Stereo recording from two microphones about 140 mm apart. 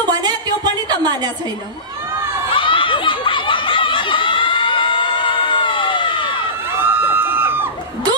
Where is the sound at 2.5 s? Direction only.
40° left (ahead or behind).